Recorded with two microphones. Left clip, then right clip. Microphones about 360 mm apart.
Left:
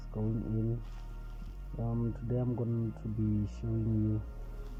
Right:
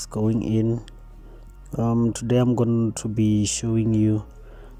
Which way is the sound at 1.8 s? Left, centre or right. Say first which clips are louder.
Right 15 dB; right.